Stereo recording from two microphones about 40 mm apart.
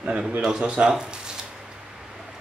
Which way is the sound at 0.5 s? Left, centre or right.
Right.